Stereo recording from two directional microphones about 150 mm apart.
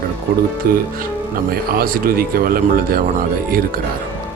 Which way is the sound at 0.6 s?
80° right.